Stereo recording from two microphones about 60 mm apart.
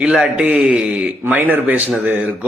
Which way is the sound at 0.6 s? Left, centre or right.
Centre.